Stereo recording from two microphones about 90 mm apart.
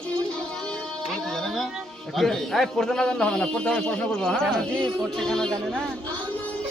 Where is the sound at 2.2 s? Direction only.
5° left (ahead or behind).